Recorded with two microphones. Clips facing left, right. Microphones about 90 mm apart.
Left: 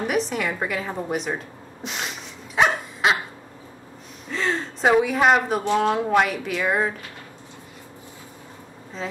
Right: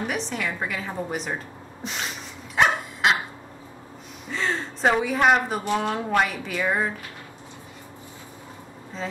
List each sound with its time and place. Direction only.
0.0 s a woman's voice: 5° left (ahead or behind)
1.8 s a sound: centre (ahead or behind)
2.5 s dog: centre (ahead or behind)
4.3 s gasp: centre (ahead or behind)
5.8 s a woman's voice: 5° left (ahead or behind)
9.0 s speech: centre (ahead or behind)